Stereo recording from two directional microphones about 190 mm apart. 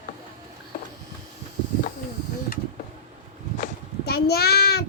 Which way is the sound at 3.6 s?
55° left (ahead or behind).